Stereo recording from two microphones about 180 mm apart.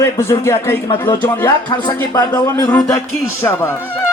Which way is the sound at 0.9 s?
25° left (ahead or behind).